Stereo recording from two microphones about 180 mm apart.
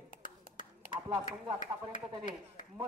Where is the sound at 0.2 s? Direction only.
45° left (ahead or behind).